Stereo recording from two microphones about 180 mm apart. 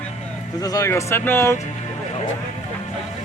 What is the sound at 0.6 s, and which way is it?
Speech, 20° left (ahead or behind).